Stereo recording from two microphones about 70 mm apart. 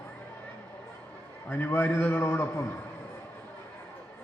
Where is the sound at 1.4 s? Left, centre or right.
Left.